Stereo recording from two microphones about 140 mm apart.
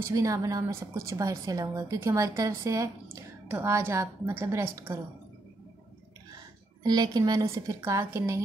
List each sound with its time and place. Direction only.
0.0 s a woman's voice: 25° right (ahead or behind)
6.8 s a woman's voice: 30° right (ahead or behind)